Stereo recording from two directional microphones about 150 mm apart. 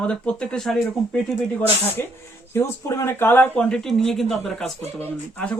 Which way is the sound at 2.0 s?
15° left (ahead or behind).